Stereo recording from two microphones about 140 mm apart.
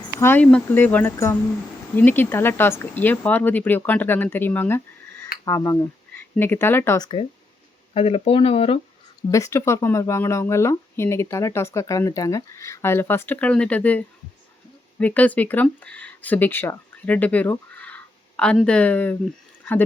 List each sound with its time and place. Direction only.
0.2 s speech: 15° left (ahead or behind)
5.5 s a sound: 20° left (ahead or behind)
6.3 s speech: 15° left (ahead or behind)
7.0 s speech: 35° left (ahead or behind)
9.3 s speech: 20° left (ahead or behind)